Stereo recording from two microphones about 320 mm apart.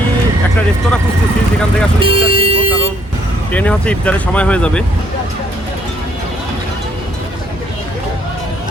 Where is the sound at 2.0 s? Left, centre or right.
Centre.